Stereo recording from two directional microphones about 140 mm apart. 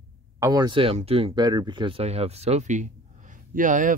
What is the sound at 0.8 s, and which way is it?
Speech, 45° right (ahead or behind).